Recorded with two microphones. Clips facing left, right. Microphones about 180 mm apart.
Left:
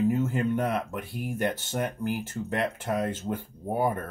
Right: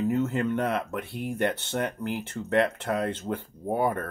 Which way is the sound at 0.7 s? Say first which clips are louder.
Right 1 dB; 65° right (ahead or behind).